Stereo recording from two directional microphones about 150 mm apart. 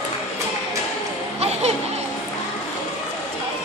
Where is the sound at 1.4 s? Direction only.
45° right (ahead or behind).